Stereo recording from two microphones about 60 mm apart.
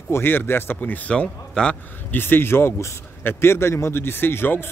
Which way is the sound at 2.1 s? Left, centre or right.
Left.